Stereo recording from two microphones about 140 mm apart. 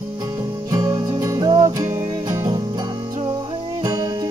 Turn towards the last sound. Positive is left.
turn(degrees=-25)  # may be behind; listen again after turning